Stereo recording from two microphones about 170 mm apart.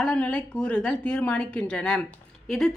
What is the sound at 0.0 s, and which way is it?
A woman's voice, 5° left (ahead or behind).